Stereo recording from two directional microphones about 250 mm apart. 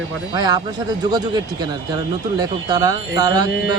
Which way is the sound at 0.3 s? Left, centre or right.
Centre.